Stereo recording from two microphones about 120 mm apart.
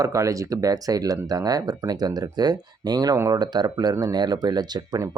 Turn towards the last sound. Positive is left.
turn(degrees=-35)  # may be behind; listen again after turning